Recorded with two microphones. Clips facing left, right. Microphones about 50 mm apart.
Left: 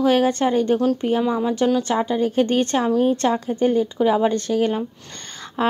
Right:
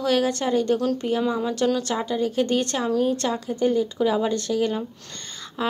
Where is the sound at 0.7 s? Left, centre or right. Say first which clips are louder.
Left 4 dB; centre.